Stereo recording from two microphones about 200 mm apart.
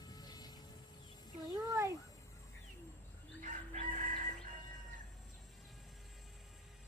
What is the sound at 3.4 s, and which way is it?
Crowing, 40° right (ahead or behind).